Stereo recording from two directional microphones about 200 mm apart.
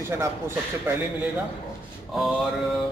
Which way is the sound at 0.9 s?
10° right (ahead or behind).